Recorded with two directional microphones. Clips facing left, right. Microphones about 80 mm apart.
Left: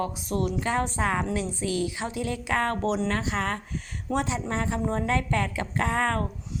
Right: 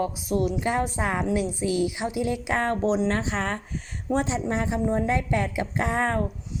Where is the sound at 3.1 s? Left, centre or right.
Right.